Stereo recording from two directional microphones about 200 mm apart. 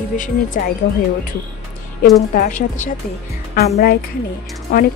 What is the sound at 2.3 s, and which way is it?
Speech, 40° left (ahead or behind).